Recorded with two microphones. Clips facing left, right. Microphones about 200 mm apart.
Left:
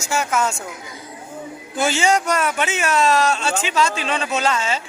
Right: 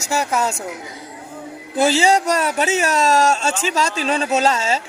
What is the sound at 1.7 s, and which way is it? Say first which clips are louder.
Speech: right 3 dB; 35° right (ahead or behind).